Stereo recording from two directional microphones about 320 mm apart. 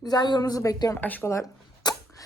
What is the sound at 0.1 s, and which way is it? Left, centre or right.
Speech, centre.